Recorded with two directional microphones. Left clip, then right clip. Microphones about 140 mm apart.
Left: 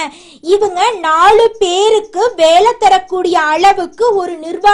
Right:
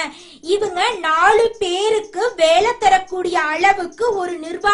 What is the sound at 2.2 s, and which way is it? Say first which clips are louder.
A woman's voice: left 6 dB; 35° left (ahead or behind).